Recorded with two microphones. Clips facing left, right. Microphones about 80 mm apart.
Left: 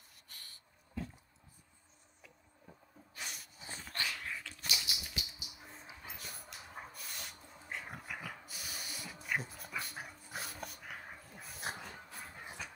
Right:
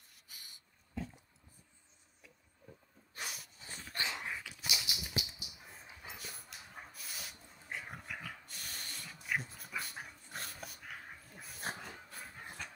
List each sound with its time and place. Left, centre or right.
0.3 s a sound: centre
3.2 s snort: centre
3.9 s dog: right; by 12.7 s centre